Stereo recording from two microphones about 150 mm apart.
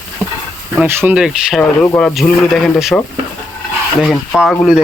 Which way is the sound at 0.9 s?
10° right (ahead or behind).